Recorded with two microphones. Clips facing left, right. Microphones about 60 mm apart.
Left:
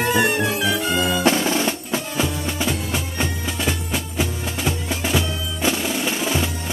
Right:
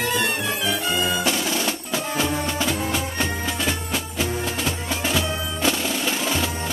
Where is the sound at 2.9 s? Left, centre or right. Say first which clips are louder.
Even; centre.